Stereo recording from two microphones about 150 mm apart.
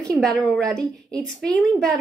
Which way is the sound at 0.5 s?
5° left (ahead or behind).